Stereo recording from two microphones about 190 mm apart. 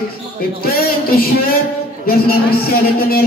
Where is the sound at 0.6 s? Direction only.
50° left (ahead or behind).